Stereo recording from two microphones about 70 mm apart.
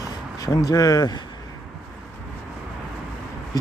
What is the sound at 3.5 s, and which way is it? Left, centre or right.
Speech, left.